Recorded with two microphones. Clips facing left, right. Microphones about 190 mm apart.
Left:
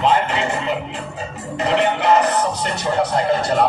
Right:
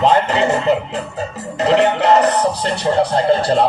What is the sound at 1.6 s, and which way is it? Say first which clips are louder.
Speech: right 4 dB; 35° right (ahead or behind).